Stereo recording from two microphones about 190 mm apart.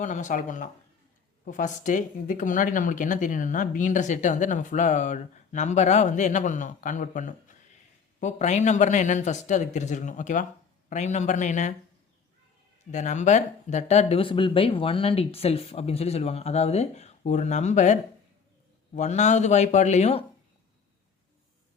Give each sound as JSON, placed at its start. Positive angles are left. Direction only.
{"t": 0.0, "sound": "speech", "side_deg": 40}
{"t": 12.9, "sound": "speech", "side_deg": 40}